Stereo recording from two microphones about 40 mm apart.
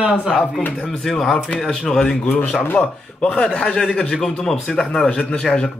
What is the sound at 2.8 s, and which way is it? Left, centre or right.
Speech, left.